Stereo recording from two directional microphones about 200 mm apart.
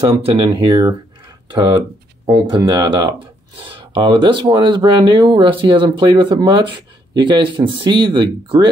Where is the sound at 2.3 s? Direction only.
20° right (ahead or behind).